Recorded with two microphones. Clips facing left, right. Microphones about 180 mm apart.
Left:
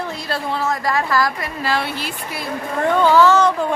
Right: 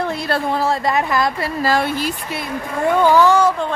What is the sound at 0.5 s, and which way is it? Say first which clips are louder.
Speech: right 1 dB; 35° right (ahead or behind).